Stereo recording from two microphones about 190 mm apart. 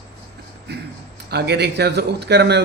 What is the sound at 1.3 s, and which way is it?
A man's voice, 60° right (ahead or behind).